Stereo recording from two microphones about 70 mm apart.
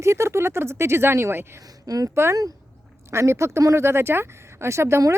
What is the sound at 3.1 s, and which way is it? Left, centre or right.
Speech, right.